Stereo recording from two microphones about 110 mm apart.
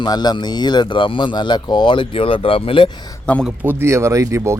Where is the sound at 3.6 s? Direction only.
20° right (ahead or behind).